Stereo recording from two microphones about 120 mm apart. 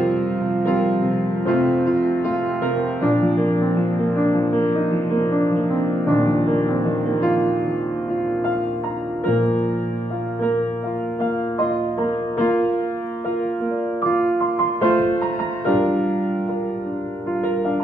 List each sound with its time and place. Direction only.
4.2 s music: 20° left (ahead or behind)
12.4 s music: 20° left (ahead or behind)
14.0 s music: 10° left (ahead or behind)